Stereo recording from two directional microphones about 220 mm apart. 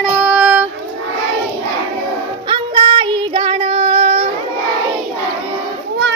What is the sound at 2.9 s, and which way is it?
Child singing, 20° right (ahead or behind).